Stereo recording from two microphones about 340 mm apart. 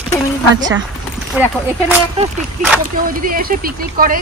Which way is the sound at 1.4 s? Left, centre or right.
Centre.